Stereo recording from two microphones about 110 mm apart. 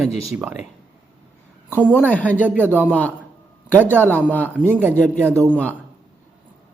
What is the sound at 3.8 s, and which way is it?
Speech, 15° right (ahead or behind).